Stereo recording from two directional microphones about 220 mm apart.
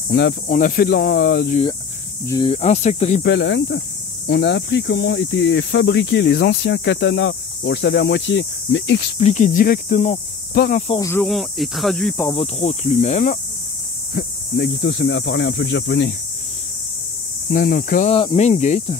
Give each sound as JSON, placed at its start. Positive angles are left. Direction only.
{"t": 0.1, "sound": "speech", "side_deg": 50}
{"t": 0.5, "sound": "speech", "side_deg": 35}
{"t": 2.2, "sound": "speech", "side_deg": 20}
{"t": 3.2, "sound": "speech", "side_deg": 50}
{"t": 9.2, "sound": "speech", "side_deg": 35}
{"t": 10.9, "sound": "speech", "side_deg": 15}
{"t": 11.2, "sound": "speech", "side_deg": 0}
{"t": 12.3, "sound": "speech", "side_deg": 25}
{"t": 14.1, "sound": "speech", "side_deg": 50}
{"t": 17.5, "sound": "speech", "side_deg": 40}
{"t": 18.1, "sound": "speech", "side_deg": 25}